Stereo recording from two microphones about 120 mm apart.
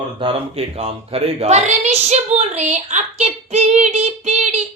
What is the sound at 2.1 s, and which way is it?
Child singing, 65° right (ahead or behind).